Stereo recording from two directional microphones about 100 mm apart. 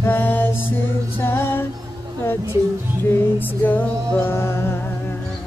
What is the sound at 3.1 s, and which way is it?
Female singing, 20° left (ahead or behind).